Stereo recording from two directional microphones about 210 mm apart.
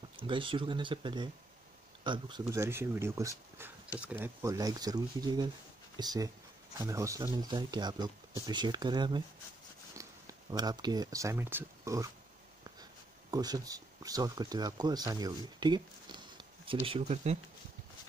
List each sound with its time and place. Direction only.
0.2 s speech: 25° right (ahead or behind)
13.3 s speech: 20° right (ahead or behind)